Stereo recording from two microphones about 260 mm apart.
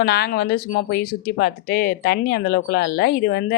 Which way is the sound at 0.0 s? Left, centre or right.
Left.